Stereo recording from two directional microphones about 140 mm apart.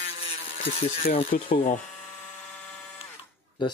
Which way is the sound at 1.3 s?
80° left.